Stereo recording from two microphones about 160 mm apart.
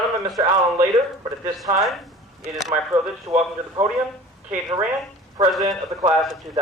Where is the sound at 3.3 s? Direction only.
25° right (ahead or behind).